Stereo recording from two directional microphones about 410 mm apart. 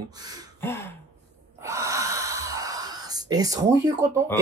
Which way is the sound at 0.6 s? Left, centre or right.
Centre.